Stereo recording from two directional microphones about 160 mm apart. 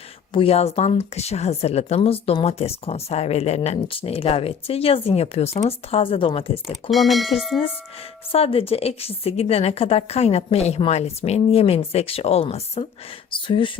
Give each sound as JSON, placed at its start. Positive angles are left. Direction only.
{"t": 0.3, "sound": "speech", "side_deg": 40}
{"t": 6.9, "sound": "speech", "side_deg": 0}
{"t": 8.3, "sound": "speech", "side_deg": 35}